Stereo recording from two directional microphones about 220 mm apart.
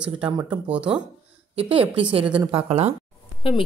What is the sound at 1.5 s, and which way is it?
A woman's voice, 25° right (ahead or behind).